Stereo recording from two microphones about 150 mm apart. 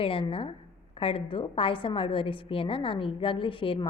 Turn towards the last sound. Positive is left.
turn(degrees=35)  # may be behind; listen again after turning